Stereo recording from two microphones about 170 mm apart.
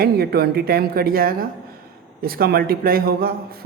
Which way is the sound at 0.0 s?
65° right (ahead or behind).